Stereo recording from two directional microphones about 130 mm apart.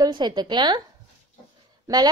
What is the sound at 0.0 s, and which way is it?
Speech, 35° right (ahead or behind).